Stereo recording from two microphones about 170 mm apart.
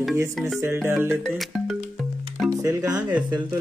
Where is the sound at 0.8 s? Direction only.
15° right (ahead or behind).